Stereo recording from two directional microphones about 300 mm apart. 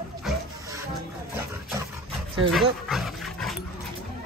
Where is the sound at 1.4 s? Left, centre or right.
Centre.